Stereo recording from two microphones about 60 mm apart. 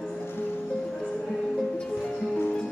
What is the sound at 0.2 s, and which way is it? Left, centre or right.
Music, left.